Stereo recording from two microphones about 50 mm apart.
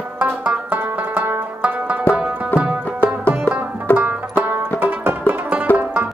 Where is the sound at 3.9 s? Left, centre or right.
Left.